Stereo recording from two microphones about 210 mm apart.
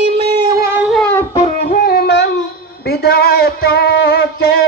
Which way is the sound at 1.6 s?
45° left (ahead or behind).